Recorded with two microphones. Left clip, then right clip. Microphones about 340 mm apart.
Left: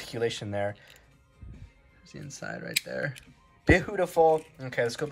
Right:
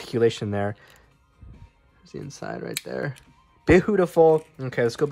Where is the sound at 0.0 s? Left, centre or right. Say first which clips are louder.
Right 9 dB; right.